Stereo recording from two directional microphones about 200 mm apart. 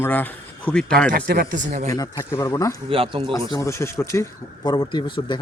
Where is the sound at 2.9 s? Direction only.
25° right (ahead or behind).